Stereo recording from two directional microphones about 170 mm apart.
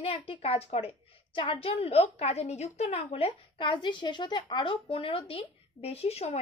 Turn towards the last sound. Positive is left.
turn(degrees=35)  # may be behind; listen again after turning